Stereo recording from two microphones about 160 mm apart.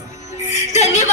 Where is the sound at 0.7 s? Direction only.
45° left (ahead or behind).